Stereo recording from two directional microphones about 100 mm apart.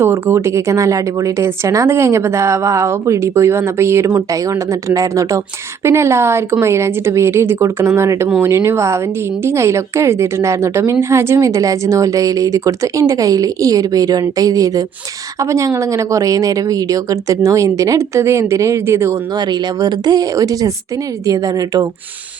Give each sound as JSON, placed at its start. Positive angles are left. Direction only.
{"t": 0.0, "sound": "a woman's voice", "side_deg": -25}
{"t": 19.4, "sound": "a woman's voice", "side_deg": -45}